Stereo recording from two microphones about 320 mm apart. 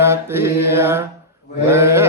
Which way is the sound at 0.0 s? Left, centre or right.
Centre.